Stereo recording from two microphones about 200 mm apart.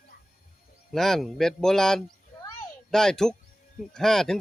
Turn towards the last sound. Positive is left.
turn(degrees=0)  # may be behind; listen again after turning